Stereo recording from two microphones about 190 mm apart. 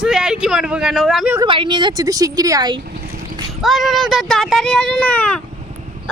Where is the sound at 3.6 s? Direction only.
Centre (ahead or behind).